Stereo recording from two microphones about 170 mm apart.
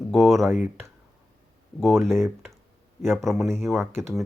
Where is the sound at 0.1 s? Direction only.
Centre (ahead or behind).